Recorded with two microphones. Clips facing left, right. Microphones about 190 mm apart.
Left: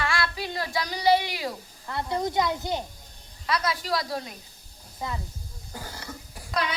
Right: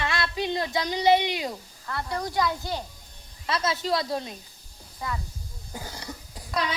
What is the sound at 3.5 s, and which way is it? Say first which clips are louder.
Speech: right 1 dB; 25° right (ahead or behind).